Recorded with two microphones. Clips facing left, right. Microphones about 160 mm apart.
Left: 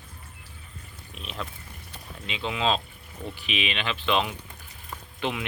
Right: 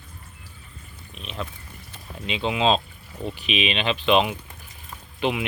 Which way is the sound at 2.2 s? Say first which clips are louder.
Right 5 dB; 20° right (ahead or behind).